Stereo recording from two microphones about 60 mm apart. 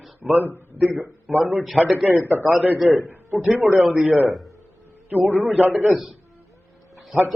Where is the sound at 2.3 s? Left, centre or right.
Right.